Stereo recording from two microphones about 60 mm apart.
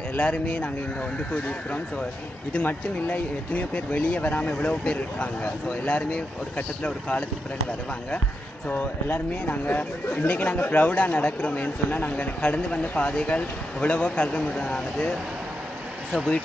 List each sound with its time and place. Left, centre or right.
0.1 s speech: left
8.6 s speech: left